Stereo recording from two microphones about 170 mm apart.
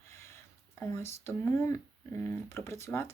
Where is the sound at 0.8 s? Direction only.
15° left (ahead or behind).